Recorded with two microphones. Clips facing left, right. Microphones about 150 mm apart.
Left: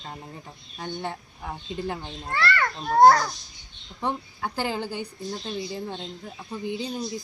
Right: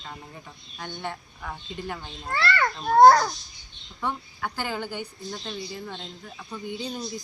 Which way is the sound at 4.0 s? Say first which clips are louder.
Left 2 dB; 30° left (ahead or behind).